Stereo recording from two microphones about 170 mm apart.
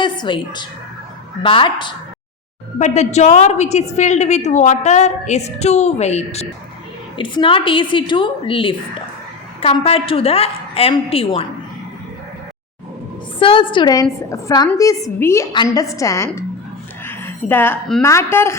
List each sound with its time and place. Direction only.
0.0 s a woman's voice: 25° left (ahead or behind)
2.7 s a woman's voice: 45° left (ahead or behind)
13.4 s a woman's voice: 30° left (ahead or behind)
17.1 s a sound: 15° left (ahead or behind)
18.0 s speech: 15° left (ahead or behind)